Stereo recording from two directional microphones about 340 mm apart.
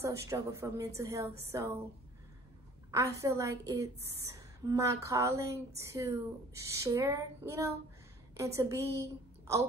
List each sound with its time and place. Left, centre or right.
0.0 s a woman's voice: centre
2.9 s a woman's voice: centre